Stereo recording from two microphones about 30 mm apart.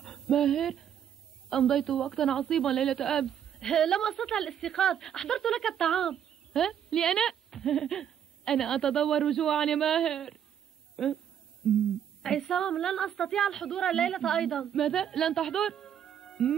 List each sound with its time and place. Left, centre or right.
0.0 s speech: centre